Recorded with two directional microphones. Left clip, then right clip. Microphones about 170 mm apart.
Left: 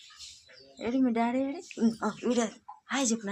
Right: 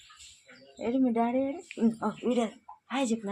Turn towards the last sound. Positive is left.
turn(degrees=5)  # may be behind; listen again after turning